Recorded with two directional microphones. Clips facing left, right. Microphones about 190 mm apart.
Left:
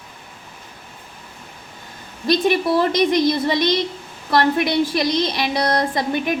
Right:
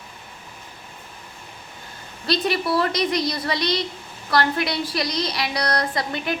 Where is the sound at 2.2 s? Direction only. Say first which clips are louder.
Left 5 dB; 20° left (ahead or behind).